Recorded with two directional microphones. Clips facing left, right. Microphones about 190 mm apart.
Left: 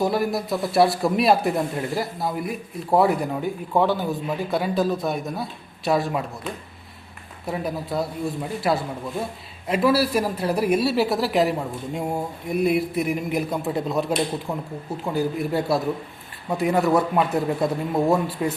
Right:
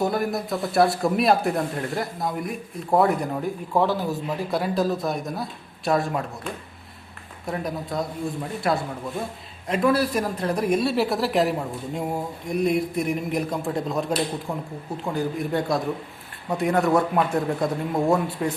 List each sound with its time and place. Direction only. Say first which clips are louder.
0.0 s speech: left 2 dB; centre (ahead or behind)
7.4 s speech: left 1 dB; 5° left (ahead or behind)
15.0 s speech: left 2 dB; 5° left (ahead or behind)